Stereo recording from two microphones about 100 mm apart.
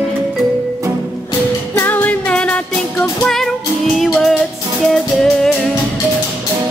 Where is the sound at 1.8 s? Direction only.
20° left (ahead or behind).